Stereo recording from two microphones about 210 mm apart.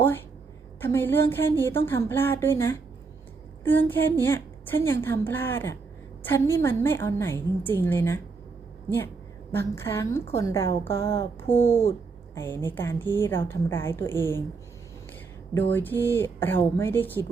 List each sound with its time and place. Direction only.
0.8 s a woman's voice: 10° left (ahead or behind)
9.5 s a woman's voice: 10° left (ahead or behind)
11.4 s speech: 30° left (ahead or behind)
11.9 s a woman's voice: 10° left (ahead or behind)
15.7 s a woman's voice: 10° left (ahead or behind)